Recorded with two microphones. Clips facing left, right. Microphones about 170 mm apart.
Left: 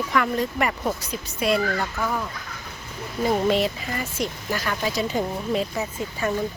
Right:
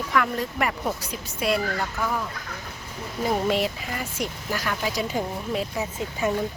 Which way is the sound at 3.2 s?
5° right (ahead or behind).